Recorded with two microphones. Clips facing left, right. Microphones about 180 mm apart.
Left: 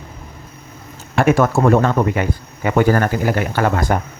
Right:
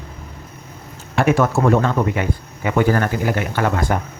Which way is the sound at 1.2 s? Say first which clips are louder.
Left 2 dB; 45° left (ahead or behind).